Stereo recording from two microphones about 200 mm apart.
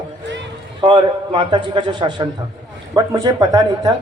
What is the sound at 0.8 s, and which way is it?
Speech, 25° right (ahead or behind).